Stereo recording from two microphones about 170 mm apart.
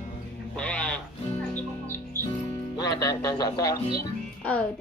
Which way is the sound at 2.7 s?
20° left (ahead or behind).